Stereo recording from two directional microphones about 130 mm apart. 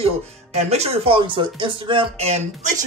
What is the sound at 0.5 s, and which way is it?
Speech, 55° right (ahead or behind).